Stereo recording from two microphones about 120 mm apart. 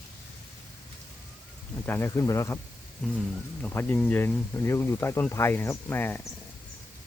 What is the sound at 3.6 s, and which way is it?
Speech, 15° left (ahead or behind).